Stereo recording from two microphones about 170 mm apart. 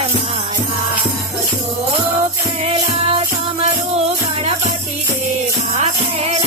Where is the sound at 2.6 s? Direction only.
35° right (ahead or behind).